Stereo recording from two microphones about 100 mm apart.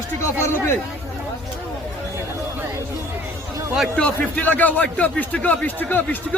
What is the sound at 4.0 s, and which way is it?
Speech, 15° left (ahead or behind).